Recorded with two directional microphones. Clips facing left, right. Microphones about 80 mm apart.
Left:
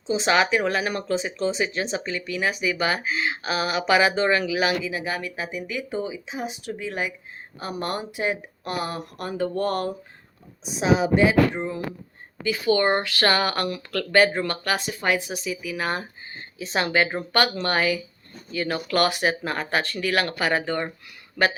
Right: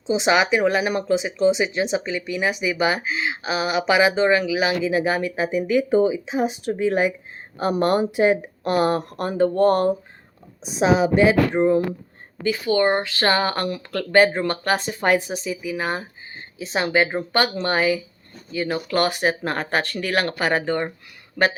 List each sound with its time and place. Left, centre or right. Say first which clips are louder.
0.1 s speech: right 2 dB; centre
4.8 s speech: right 8 dB; right
12.8 s speech: right 2 dB; centre
13.1 s speech: right 2 dB; right
19.5 s speech: right 2 dB; right
20.1 s speech: right 1 dB; right